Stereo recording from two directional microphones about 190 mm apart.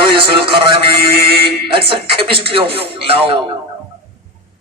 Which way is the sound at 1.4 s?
30° right (ahead or behind).